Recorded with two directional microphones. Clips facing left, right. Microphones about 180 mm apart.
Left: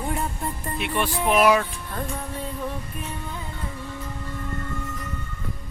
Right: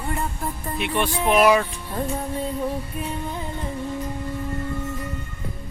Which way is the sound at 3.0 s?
20° right (ahead or behind).